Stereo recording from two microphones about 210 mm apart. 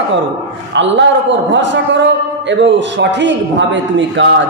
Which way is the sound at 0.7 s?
60° right (ahead or behind).